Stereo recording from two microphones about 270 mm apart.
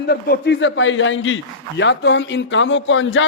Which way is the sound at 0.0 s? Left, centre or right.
Left.